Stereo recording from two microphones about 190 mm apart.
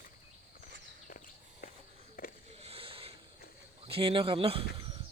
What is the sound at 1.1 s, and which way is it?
Walk, 45° left (ahead or behind).